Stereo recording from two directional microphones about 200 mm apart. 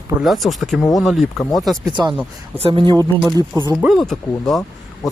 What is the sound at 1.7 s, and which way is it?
Speech, 20° right (ahead or behind).